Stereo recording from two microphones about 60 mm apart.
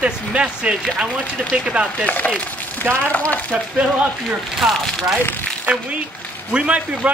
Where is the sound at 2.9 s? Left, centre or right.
Right.